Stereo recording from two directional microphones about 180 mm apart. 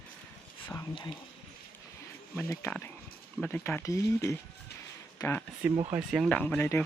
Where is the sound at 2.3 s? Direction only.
15° left (ahead or behind).